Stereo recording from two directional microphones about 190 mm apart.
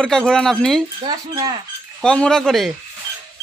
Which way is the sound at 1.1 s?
20° right (ahead or behind).